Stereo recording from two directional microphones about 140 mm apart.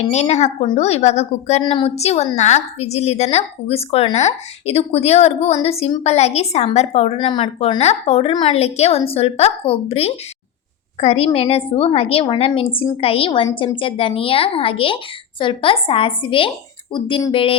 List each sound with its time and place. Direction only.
0.1 s a woman's voice: 55° left (ahead or behind)
1.6 s a woman's voice: 40° left (ahead or behind)
7.2 s speech: 35° left (ahead or behind)
7.8 s a woman's voice: 50° left (ahead or behind)